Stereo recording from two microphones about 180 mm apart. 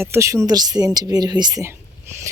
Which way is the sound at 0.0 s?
15° right (ahead or behind).